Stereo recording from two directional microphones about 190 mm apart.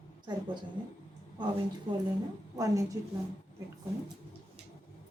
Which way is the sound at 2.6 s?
20° right (ahead or behind).